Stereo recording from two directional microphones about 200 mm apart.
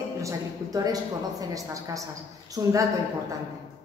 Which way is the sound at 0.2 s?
15° right (ahead or behind).